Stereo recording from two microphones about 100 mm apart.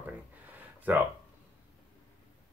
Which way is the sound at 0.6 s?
15° right (ahead or behind).